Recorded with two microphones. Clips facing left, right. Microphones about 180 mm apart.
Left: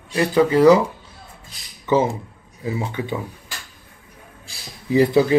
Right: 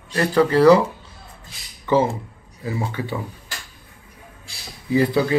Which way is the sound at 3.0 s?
20° left (ahead or behind).